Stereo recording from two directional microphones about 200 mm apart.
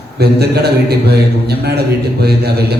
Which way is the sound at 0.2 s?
55° right (ahead or behind).